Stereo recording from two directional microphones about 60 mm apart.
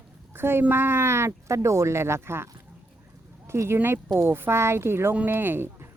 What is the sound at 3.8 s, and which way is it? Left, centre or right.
Speech, right.